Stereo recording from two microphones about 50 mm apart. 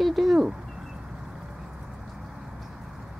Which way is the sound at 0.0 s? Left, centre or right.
Centre.